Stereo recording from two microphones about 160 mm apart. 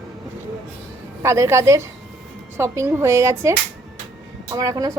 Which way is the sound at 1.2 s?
20° right (ahead or behind).